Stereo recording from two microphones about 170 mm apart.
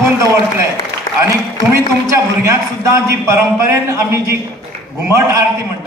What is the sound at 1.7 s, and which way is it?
A man's voice, 15° right (ahead or behind).